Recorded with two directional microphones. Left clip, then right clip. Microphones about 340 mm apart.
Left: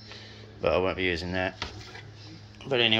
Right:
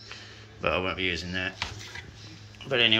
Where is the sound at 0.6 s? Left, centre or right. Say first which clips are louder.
Left 2 dB; centre.